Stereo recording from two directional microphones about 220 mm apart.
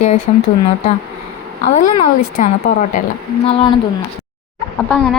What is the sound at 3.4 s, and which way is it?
Speech, 25° left (ahead or behind).